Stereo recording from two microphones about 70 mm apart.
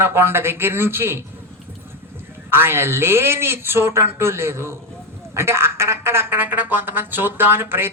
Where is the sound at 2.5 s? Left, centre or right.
Right.